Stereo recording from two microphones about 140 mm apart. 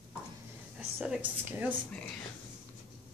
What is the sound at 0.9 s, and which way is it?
Speech, 10° right (ahead or behind).